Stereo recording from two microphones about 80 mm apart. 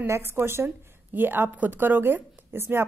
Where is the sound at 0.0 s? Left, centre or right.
Right.